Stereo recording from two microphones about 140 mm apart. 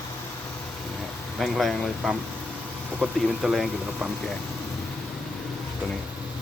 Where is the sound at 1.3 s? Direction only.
Centre (ahead or behind).